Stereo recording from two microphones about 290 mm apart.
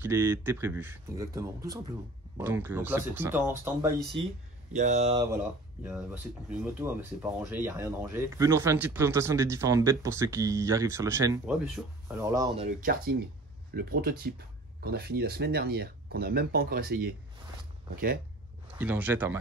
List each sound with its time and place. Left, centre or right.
0.0 s speech: centre
4.7 s speech: right
12.8 s speech: right
18.8 s speech: centre